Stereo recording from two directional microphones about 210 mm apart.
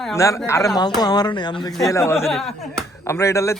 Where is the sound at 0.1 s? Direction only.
15° left (ahead or behind).